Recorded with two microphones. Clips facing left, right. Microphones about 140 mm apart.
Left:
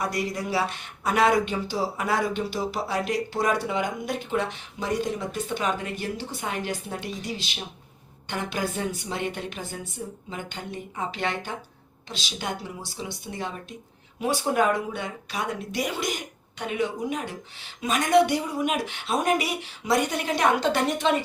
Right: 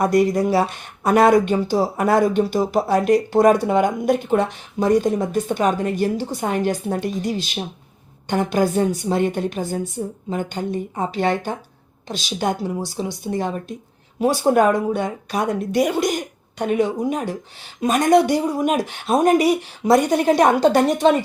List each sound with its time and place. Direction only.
0.0 s a woman's voice: 50° right (ahead or behind)